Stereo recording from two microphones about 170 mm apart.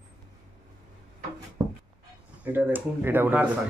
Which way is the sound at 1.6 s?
25° right (ahead or behind).